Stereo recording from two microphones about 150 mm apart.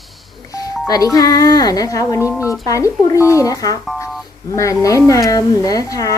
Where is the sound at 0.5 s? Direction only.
25° left (ahead or behind).